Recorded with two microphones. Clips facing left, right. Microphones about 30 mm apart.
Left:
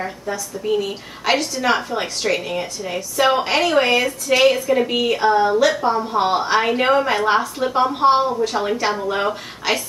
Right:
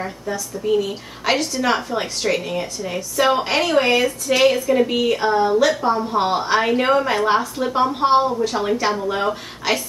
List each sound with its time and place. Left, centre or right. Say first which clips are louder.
0.0 s a woman's voice: even; centre